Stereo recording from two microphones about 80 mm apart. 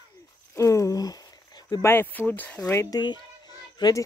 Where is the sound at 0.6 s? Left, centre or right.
Left.